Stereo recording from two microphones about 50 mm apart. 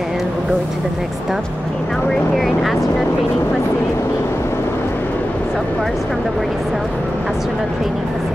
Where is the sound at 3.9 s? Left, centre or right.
Left.